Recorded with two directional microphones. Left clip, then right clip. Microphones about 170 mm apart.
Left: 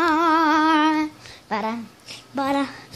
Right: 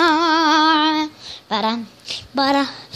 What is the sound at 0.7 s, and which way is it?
Female singing, 5° left (ahead or behind).